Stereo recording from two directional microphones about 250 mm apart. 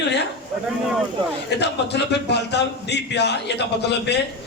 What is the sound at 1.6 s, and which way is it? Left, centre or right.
A man's voice, left.